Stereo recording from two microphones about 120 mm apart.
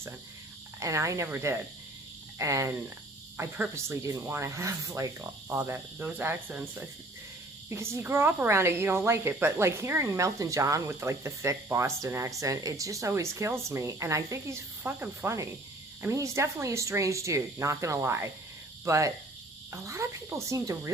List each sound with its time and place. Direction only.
0.8 s speech: 25° right (ahead or behind)
5.5 s speech: 20° right (ahead or behind)